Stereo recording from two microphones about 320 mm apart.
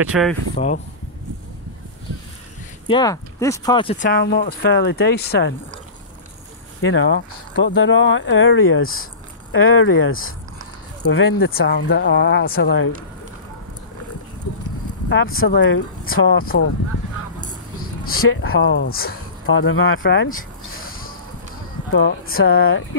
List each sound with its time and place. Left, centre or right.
0.0 s speech: centre
2.9 s speech: centre; by 5.5 s left
6.8 s speech: left
15.0 s speech: left
18.1 s speech: left
19.4 s speech: left
20.8 s a sound: left
21.9 s speech: left